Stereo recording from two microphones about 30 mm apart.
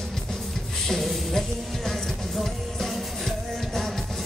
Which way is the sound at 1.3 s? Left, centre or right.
Centre.